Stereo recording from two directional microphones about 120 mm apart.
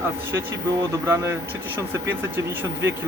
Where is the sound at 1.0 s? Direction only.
20° right (ahead or behind).